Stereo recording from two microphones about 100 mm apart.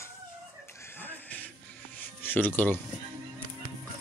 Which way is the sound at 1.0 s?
15° left (ahead or behind).